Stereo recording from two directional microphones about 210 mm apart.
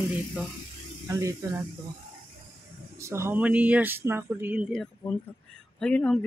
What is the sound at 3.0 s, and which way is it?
Speech, 15° right (ahead or behind).